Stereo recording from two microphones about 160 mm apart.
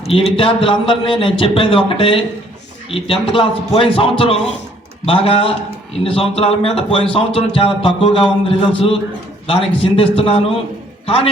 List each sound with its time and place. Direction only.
0.1 s a man's voice: 35° left (ahead or behind)